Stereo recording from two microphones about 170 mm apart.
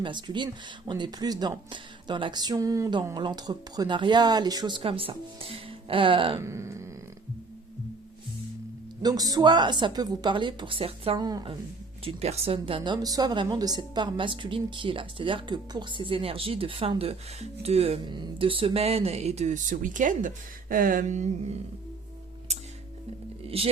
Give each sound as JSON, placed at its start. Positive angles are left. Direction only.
{"t": 0.0, "sound": "speech", "side_deg": -25}
{"t": 6.4, "sound": "a sound", "side_deg": -15}
{"t": 9.0, "sound": "speech", "side_deg": -20}
{"t": 11.3, "sound": "speech", "side_deg": -20}
{"t": 12.0, "sound": "a woman's voice", "side_deg": -35}
{"t": 22.5, "sound": "music", "side_deg": -40}
{"t": 23.5, "sound": "a woman's voice", "side_deg": -35}